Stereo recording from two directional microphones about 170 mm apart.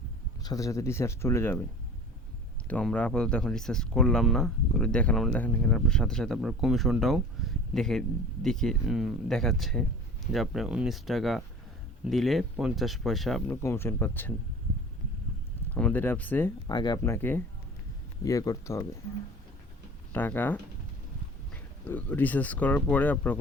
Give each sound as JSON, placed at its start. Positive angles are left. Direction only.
{"t": 0.4, "sound": "speech", "side_deg": 20}
{"t": 2.6, "sound": "speech", "side_deg": 10}
{"t": 13.5, "sound": "speech", "side_deg": 15}
{"t": 15.7, "sound": "speech", "side_deg": 10}
{"t": 16.6, "sound": "speech", "side_deg": 25}
{"t": 17.0, "sound": "speech", "side_deg": 10}
{"t": 20.1, "sound": "speech", "side_deg": 10}